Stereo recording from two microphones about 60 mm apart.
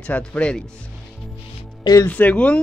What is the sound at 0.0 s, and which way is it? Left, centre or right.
Speech, left.